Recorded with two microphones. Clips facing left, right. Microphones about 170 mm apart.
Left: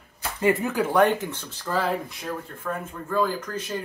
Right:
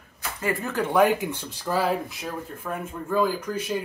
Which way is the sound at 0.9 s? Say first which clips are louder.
Right 1 dB; 5° right (ahead or behind).